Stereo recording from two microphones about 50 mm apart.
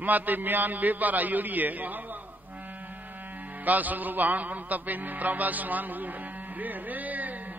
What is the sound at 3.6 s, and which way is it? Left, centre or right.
Music, right.